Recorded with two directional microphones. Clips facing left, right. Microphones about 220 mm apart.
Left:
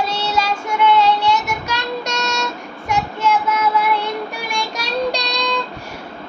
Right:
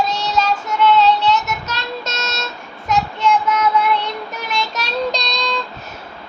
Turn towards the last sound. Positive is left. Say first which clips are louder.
# left 1 dB
turn(degrees=10)  # may be behind; listen again after turning